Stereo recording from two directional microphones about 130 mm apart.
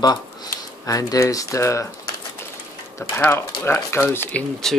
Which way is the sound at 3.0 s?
20° left (ahead or behind).